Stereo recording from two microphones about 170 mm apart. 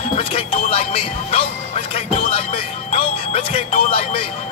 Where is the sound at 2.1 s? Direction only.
35° left (ahead or behind).